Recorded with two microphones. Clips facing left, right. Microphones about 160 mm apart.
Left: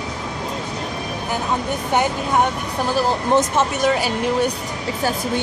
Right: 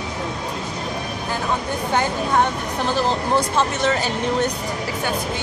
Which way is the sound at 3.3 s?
20° left (ahead or behind).